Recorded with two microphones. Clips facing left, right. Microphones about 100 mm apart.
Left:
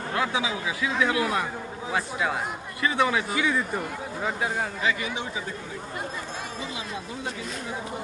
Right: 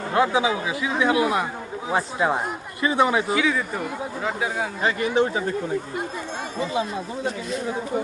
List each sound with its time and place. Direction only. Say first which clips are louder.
0.1 s speech: right 7 dB; 30° right (ahead or behind)
3.3 s speech: right 3 dB; centre (ahead or behind)
4.8 s speech: right 7 dB; 45° right (ahead or behind)